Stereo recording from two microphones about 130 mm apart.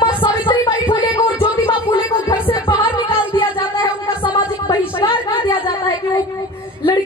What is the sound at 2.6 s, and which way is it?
Music, 40° left (ahead or behind).